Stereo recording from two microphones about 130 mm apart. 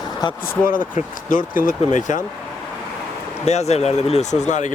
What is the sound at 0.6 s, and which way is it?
Speech, 90° left.